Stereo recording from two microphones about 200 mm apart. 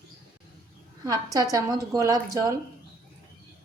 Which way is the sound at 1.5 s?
20° right (ahead or behind).